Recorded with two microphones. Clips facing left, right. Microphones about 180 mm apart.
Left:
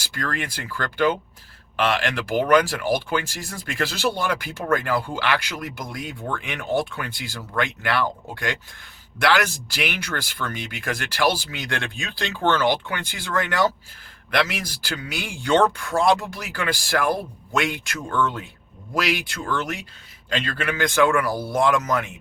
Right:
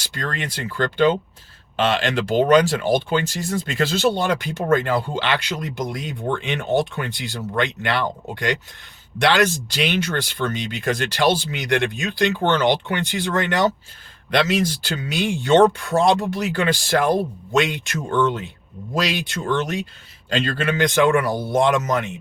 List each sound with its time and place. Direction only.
0.0 s speech: 25° right (ahead or behind)